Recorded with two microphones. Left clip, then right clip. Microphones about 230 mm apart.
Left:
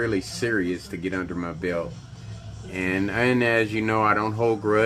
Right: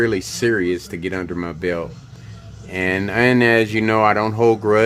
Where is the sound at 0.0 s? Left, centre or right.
Right.